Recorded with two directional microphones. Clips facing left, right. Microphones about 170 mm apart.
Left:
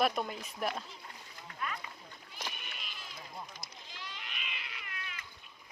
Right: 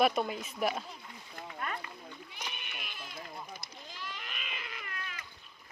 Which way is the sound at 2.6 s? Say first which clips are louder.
Right 3 dB; 60° right (ahead or behind).